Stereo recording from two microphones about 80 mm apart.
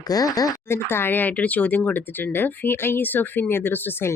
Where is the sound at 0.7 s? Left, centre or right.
Left.